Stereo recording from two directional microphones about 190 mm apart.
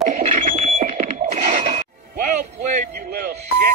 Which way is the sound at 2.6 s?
40° right (ahead or behind).